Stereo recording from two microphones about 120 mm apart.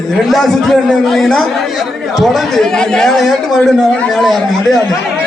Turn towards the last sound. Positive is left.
turn(degrees=0)  # may be behind; listen again after turning